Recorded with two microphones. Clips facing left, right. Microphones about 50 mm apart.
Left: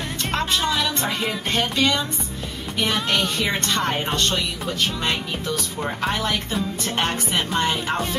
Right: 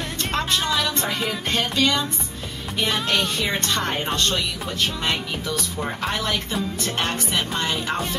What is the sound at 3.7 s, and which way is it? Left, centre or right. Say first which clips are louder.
Speech: left 2 dB; centre.